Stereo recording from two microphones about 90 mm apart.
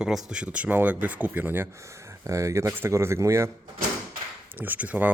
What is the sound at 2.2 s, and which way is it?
Speech, 35° right (ahead or behind).